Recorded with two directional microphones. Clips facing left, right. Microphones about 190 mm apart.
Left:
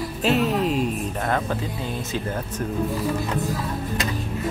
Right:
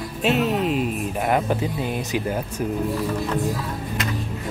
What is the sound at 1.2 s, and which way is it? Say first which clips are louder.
Speech: right 5 dB; 15° right (ahead or behind).